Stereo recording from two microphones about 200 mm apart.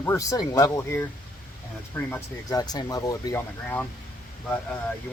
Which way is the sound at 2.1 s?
15° left (ahead or behind).